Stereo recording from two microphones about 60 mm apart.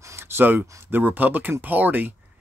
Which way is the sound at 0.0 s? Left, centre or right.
Right.